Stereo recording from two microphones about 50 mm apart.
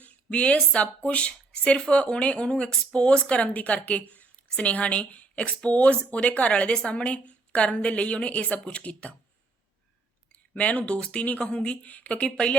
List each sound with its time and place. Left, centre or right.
0.0 s speech: left
10.3 s speech: left